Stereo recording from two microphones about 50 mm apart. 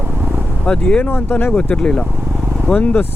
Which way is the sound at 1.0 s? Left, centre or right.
Left.